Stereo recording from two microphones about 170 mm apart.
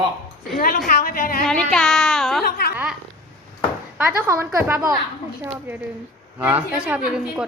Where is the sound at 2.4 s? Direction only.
65° left (ahead or behind).